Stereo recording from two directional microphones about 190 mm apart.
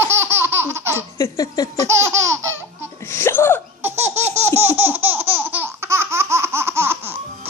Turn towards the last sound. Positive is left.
turn(degrees=-10)  # may be behind; listen again after turning